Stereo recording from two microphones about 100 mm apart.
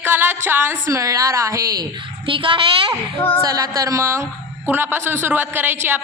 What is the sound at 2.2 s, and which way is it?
Speech, 60° right (ahead or behind).